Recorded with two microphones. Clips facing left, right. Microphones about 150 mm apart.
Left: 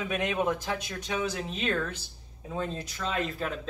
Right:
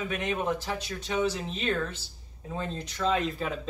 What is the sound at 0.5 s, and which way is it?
Speech, 10° left (ahead or behind).